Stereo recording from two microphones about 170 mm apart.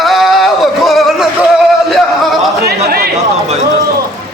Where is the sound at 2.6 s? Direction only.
65° right (ahead or behind).